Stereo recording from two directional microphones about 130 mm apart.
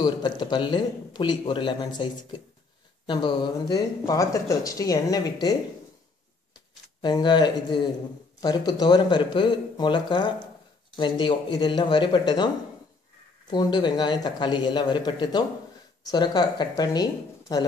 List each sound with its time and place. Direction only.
0.0 s speech: 35° left (ahead or behind)
3.1 s speech: 35° left (ahead or behind)
7.0 s speech: 35° left (ahead or behind)
13.5 s speech: 35° left (ahead or behind)